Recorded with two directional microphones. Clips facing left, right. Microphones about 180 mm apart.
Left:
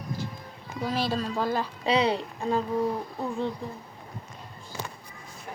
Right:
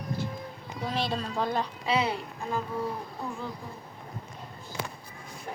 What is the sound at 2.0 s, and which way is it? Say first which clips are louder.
Speech: left 6 dB; 30° left (ahead or behind).